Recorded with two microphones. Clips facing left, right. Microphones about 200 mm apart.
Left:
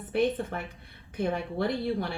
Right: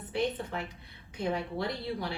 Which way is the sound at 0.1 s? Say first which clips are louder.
Left 5 dB; 55° left (ahead or behind).